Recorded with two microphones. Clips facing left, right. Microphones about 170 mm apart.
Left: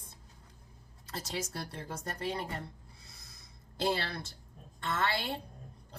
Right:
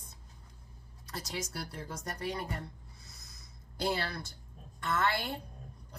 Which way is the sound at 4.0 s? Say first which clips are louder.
Right 1 dB; 25° left (ahead or behind).